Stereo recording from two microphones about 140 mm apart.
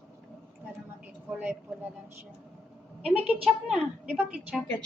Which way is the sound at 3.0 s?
10° right (ahead or behind).